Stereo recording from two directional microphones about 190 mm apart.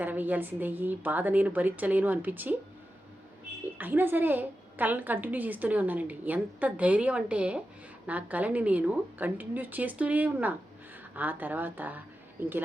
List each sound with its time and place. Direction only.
0.0 s a woman's voice: 10° right (ahead or behind)
3.8 s a woman's voice: 10° right (ahead or behind)